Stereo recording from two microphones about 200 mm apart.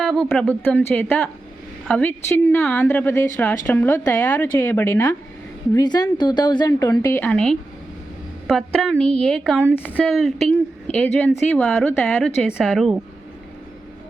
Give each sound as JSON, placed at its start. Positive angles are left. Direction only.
{"t": 0.3, "sound": "a woman's voice", "side_deg": 10}